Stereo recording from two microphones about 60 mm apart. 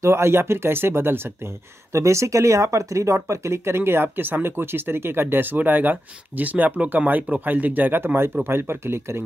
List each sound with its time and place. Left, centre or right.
0.0 s speech: right
1.9 s speech: right